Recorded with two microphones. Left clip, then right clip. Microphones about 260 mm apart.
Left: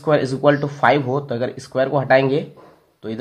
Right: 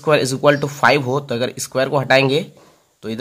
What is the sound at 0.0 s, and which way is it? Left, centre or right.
Speech, right.